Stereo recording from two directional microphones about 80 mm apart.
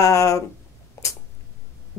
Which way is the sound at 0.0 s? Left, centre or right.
Left.